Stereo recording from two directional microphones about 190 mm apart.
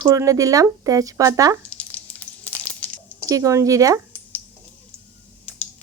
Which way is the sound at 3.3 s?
15° right (ahead or behind).